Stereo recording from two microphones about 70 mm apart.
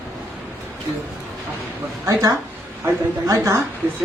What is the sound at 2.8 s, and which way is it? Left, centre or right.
Speech, right.